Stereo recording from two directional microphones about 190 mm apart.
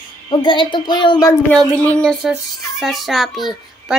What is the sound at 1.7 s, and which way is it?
A child's voice, 5° left (ahead or behind).